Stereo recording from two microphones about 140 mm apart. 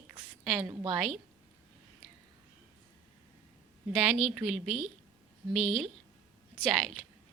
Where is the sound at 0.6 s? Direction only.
30° right (ahead or behind).